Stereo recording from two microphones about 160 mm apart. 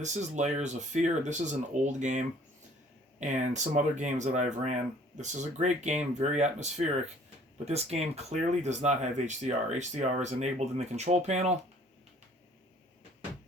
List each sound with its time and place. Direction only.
0.0 s speech: 45° right (ahead or behind)